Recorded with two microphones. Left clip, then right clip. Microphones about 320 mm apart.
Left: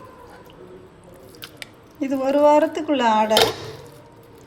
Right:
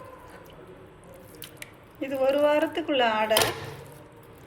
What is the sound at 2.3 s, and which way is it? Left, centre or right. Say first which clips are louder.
Speech: left 7 dB; left.